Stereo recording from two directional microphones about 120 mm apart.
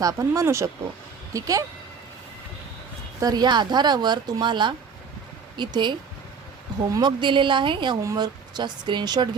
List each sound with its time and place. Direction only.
0.0 s speech: 25° right (ahead or behind)
3.2 s speech: 35° right (ahead or behind)
6.8 s speech: 30° right (ahead or behind)
7.2 s speech: 40° right (ahead or behind)